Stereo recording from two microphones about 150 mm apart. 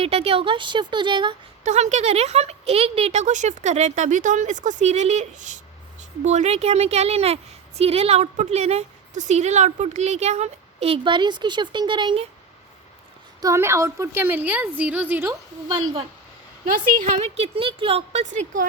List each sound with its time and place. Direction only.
0.0 s speech: 40° right (ahead or behind)
1.6 s a woman's voice: 50° right (ahead or behind)
13.4 s a woman's voice: 20° right (ahead or behind)
17.2 s a woman's voice: 45° right (ahead or behind)